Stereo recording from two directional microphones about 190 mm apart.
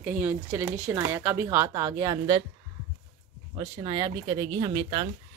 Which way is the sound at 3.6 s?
25° right (ahead or behind).